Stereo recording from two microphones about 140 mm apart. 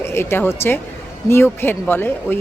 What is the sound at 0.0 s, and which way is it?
Speech, 15° left (ahead or behind).